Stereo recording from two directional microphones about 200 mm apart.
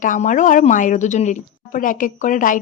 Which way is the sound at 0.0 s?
40° left (ahead or behind).